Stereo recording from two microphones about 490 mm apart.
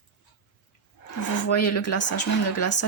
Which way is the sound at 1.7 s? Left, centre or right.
Left.